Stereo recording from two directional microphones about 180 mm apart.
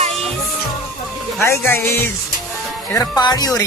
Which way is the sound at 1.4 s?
15° left (ahead or behind).